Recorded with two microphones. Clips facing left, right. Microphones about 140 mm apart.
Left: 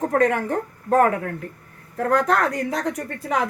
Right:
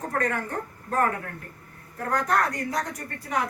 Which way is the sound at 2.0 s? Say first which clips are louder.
Left 5 dB; 90° left.